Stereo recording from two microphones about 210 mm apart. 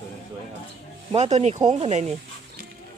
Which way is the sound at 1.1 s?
30° right (ahead or behind).